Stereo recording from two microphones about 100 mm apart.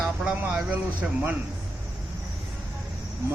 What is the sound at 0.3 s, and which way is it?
A man's voice, 20° right (ahead or behind).